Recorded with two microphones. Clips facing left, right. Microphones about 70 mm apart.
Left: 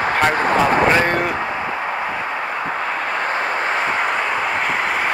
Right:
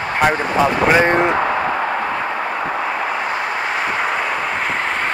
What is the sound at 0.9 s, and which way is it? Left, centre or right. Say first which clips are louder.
Speech: right 3 dB; centre.